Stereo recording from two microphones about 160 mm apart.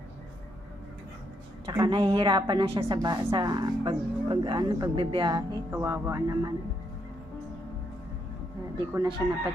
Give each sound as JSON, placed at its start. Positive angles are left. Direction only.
{"t": 1.6, "sound": "a woman's voice", "side_deg": -20}
{"t": 1.9, "sound": "a woman's voice", "side_deg": -35}
{"t": 8.9, "sound": "a woman's voice", "side_deg": -20}